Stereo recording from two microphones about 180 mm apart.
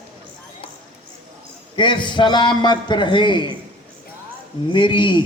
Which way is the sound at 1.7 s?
25° left (ahead or behind).